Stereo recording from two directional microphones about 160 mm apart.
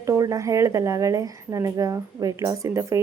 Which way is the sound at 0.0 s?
20° right (ahead or behind).